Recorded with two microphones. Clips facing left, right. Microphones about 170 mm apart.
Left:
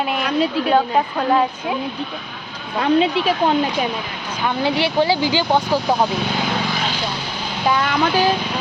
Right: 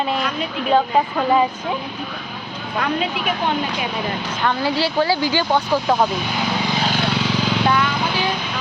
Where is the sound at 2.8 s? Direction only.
30° left (ahead or behind).